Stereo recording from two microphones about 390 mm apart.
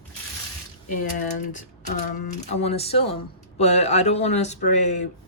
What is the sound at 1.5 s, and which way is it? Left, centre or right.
Speech, centre.